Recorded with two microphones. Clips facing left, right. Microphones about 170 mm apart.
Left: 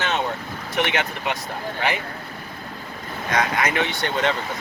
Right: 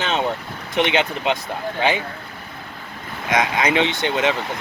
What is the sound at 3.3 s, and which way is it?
Speech, 20° right (ahead or behind).